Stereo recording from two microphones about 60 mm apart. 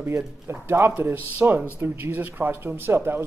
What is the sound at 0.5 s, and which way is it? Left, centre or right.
Speech, right.